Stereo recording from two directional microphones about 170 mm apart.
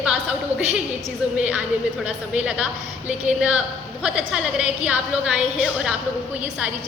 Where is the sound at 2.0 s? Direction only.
5° right (ahead or behind).